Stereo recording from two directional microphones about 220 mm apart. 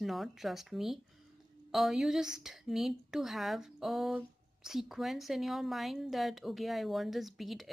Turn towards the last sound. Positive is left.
turn(degrees=0)  # may be behind; listen again after turning